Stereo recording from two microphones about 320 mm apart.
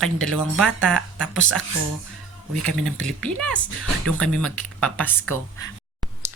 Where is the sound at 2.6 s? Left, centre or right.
Centre.